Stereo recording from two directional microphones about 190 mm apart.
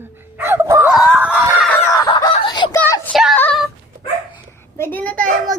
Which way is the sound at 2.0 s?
20° left (ahead or behind).